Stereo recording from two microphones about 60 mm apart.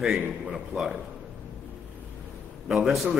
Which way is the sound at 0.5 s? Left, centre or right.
Centre.